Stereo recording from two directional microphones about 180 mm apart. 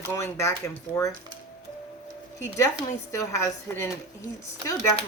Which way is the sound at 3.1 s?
15° left (ahead or behind).